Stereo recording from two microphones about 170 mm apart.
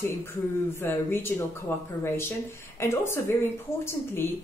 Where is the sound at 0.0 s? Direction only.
15° left (ahead or behind).